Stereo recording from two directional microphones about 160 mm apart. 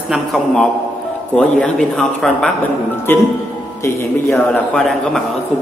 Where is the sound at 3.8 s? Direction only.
15° left (ahead or behind).